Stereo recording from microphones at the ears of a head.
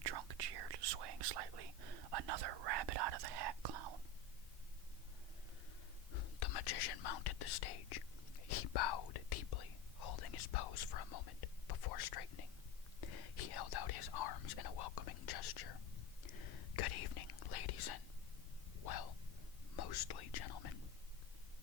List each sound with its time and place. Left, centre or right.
0.0 s whispering: right
6.1 s whispering: left
18.8 s a sound: left
19.7 s whispering: left